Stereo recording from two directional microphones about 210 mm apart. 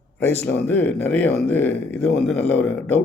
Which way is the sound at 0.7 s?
10° left (ahead or behind).